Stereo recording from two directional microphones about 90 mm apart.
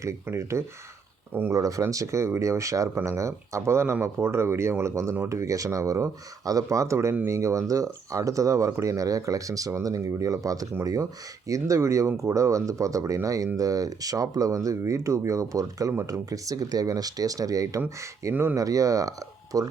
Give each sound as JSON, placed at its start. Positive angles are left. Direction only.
{"t": 0.0, "sound": "speech", "side_deg": -35}
{"t": 1.5, "sound": "speech", "side_deg": -40}